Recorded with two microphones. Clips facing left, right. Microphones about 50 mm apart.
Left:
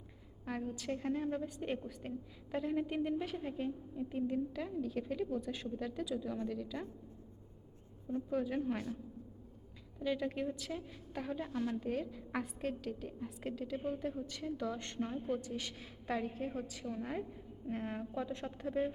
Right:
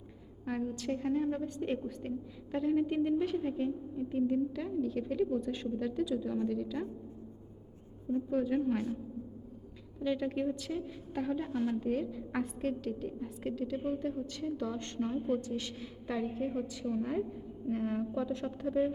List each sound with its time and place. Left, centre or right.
0.4 s a woman's voice: centre
8.1 s a woman's voice: centre
10.0 s a woman's voice: centre
11.5 s a woman's voice: centre
11.8 s a woman's voice: centre
16.3 s a woman's voice: centre